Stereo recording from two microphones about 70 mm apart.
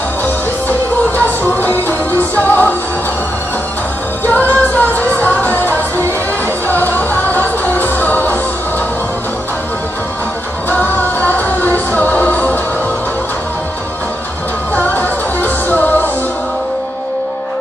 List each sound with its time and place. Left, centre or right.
0.2 s music: left
4.3 s music: left
10.7 s music: left
14.8 s music: left